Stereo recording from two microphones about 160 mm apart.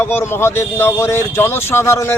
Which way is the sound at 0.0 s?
15° left (ahead or behind).